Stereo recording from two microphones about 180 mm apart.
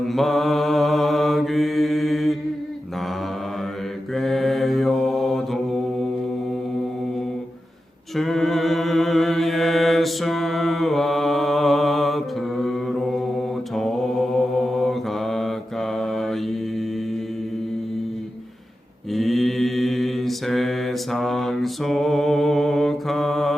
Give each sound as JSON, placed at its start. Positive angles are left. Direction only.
{"t": 0.0, "sound": "mantra", "side_deg": 0}
{"t": 4.1, "sound": "mantra", "side_deg": 0}
{"t": 8.1, "sound": "a capella", "side_deg": 0}
{"t": 13.7, "sound": "mantra", "side_deg": 0}
{"t": 19.1, "sound": "mantra", "side_deg": 0}